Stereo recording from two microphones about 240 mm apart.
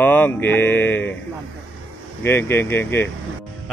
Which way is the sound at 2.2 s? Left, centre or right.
Centre.